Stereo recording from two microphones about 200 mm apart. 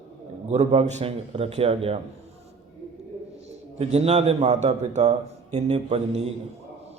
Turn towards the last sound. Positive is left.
turn(degrees=-30)  # may be behind; listen again after turning